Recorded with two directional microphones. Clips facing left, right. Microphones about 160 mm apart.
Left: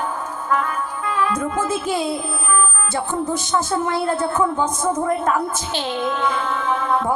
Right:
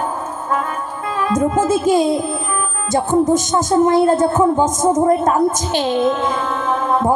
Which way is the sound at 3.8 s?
45° right (ahead or behind).